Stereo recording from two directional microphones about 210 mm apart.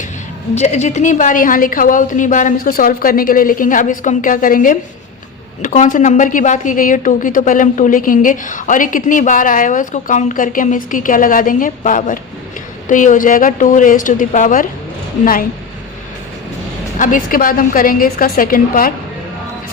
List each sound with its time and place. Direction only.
0.5 s a woman's voice: 30° left (ahead or behind)
17.0 s a woman's voice: 40° left (ahead or behind)